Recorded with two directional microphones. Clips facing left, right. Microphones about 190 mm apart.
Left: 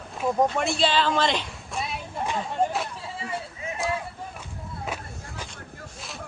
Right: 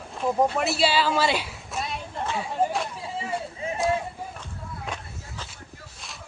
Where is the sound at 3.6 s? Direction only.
30° right (ahead or behind).